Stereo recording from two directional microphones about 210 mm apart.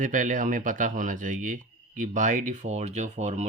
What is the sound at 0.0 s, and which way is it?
Speech, 40° right (ahead or behind).